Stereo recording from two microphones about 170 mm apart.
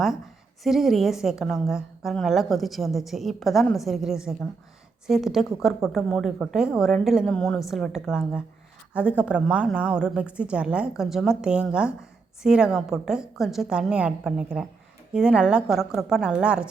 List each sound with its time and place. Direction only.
0.6 s a woman's voice: centre (ahead or behind)